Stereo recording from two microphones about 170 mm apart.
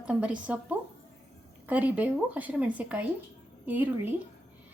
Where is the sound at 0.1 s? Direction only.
5° right (ahead or behind).